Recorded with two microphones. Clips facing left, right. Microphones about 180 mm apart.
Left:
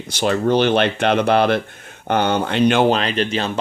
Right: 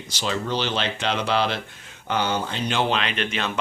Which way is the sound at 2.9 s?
40° left (ahead or behind).